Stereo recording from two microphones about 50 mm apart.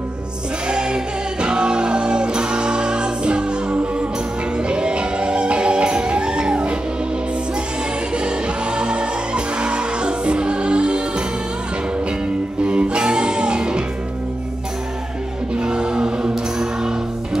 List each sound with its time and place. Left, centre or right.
0.7 s music: centre
8.1 s music: centre
12.6 s music: right
15.6 s music: centre